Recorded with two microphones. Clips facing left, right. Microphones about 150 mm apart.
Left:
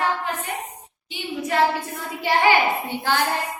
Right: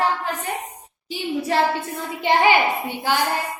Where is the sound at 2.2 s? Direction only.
20° right (ahead or behind).